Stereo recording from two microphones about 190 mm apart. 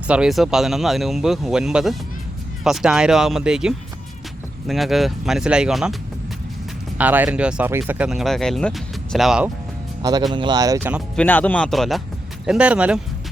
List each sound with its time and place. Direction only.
0.1 s speech: centre (ahead or behind)
7.0 s speech: 10° right (ahead or behind)
10.0 s speech: 20° right (ahead or behind)
11.2 s speech: 10° left (ahead or behind)